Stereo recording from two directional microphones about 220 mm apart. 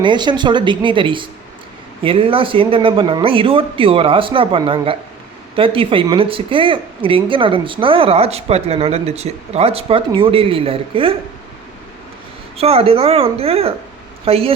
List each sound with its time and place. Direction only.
0.0 s a woman's voice: 20° right (ahead or behind)
12.5 s a woman's voice: 25° right (ahead or behind)